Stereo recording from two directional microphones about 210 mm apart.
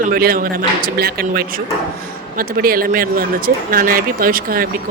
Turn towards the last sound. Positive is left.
turn(degrees=-45)  # may be behind; listen again after turning